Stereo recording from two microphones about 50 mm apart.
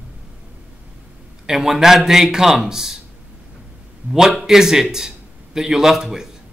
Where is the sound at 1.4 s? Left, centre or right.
Centre.